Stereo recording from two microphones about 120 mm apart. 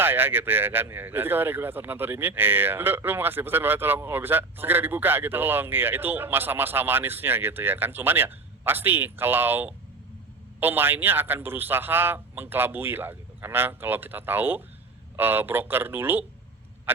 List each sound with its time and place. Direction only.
0.0 s speech: 15° right (ahead or behind)